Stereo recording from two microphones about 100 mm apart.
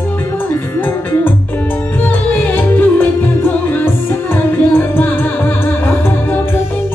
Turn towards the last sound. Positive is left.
turn(degrees=20)  # may be behind; listen again after turning